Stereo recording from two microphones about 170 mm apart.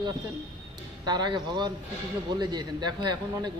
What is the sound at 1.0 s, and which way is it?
A man's voice, 25° right (ahead or behind).